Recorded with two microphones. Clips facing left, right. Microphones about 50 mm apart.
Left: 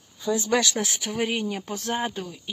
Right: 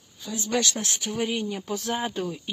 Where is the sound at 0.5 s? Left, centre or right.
Left.